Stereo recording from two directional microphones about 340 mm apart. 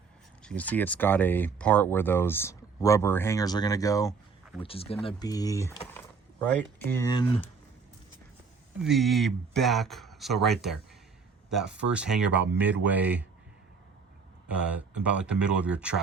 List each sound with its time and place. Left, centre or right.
0.4 s speech: centre
8.8 s speech: centre
14.4 s speech: centre